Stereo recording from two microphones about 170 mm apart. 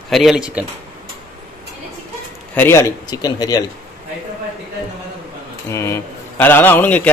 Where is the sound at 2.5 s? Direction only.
15° left (ahead or behind).